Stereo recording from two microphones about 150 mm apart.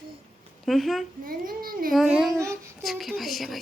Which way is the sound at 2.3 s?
20° right (ahead or behind).